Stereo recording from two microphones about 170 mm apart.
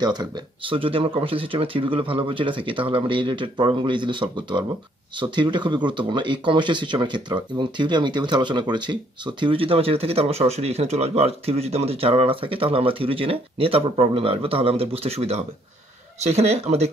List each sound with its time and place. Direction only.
0.0 s speech: 25° right (ahead or behind)